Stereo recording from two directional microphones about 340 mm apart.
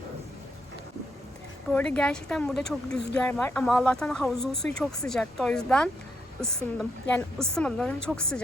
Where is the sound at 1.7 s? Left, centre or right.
Centre.